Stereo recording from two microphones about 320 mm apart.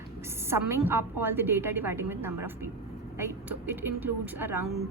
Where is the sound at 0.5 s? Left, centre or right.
Centre.